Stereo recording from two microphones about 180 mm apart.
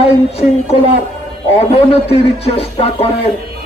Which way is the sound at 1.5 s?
35° left (ahead or behind).